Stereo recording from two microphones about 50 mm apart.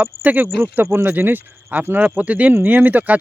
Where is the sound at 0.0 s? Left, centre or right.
Right.